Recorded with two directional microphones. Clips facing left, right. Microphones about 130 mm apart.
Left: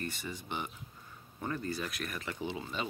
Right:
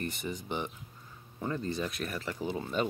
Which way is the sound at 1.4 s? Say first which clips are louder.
Right 3 dB; 20° right (ahead or behind).